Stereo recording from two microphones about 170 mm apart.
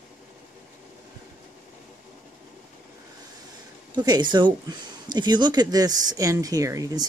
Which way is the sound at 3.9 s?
25° right (ahead or behind).